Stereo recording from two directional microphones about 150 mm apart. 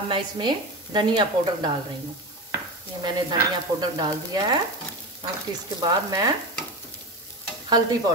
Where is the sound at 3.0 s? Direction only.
30° right (ahead or behind).